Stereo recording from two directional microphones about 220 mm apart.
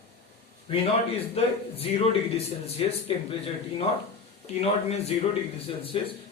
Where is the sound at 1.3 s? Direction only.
25° left (ahead or behind).